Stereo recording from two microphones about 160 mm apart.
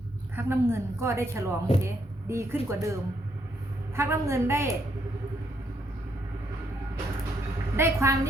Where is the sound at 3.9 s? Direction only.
20° right (ahead or behind).